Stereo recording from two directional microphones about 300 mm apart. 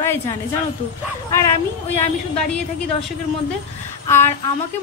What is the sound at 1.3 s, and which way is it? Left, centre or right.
Speech, centre.